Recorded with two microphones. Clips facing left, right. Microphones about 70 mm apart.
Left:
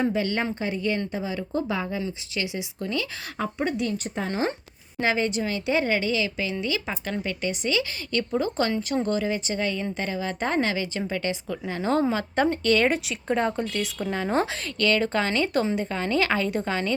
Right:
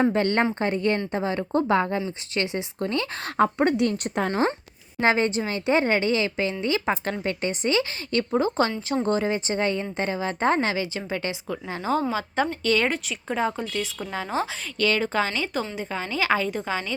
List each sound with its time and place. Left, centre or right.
0.1 s speech: right
2.3 s speech: right
4.3 s a woman's voice: right; by 14.4 s centre
14.8 s a woman's voice: centre
15.3 s a woman's voice: centre